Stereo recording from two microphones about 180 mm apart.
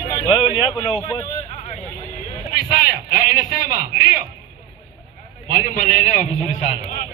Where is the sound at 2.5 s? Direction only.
55° left (ahead or behind).